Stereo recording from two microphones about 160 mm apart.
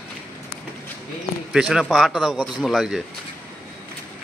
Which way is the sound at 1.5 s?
5° right (ahead or behind).